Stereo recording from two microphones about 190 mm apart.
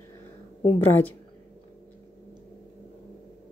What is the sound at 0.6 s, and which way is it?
Speech, 10° left (ahead or behind).